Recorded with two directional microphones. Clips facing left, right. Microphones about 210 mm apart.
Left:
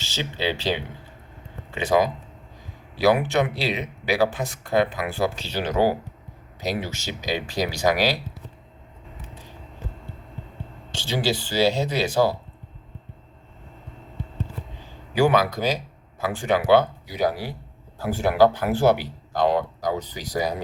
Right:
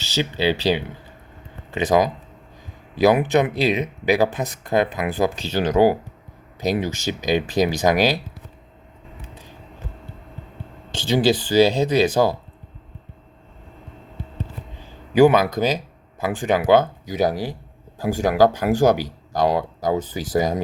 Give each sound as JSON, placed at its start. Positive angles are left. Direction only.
{"t": 0.2, "sound": "speech", "side_deg": -10}
{"t": 3.0, "sound": "speech", "side_deg": -20}
{"t": 5.4, "sound": "speech", "side_deg": -45}
{"t": 5.7, "sound": "speech", "side_deg": -15}
{"t": 10.9, "sound": "speech", "side_deg": -20}
{"t": 15.1, "sound": "speech", "side_deg": -20}
{"t": 18.1, "sound": "speech", "side_deg": -45}